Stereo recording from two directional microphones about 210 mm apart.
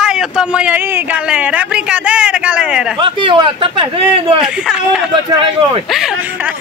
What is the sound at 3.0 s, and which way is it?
A man's voice, 25° right (ahead or behind).